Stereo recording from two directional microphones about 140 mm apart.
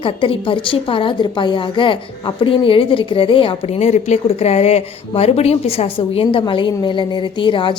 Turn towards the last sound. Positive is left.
turn(degrees=35)  # may be behind; listen again after turning